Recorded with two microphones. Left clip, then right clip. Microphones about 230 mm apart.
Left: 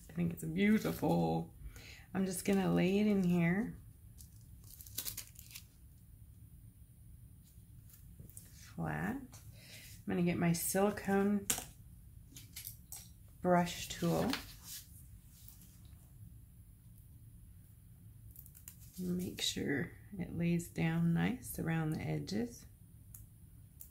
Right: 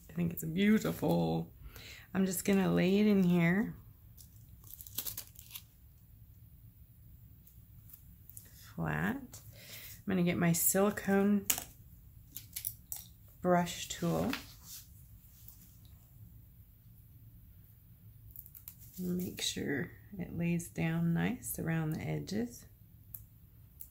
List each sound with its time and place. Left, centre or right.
0.0 s speech: centre
4.9 s tearing: centre
8.5 s a sound: centre
10.0 s speech: right
13.4 s speech: centre
19.1 s speech: centre